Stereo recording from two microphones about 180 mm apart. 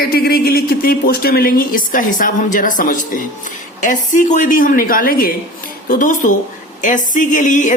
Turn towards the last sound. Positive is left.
turn(degrees=45)  # may be behind; listen again after turning